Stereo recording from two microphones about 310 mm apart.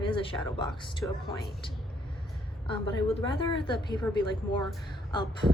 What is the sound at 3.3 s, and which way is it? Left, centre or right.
Speech, centre.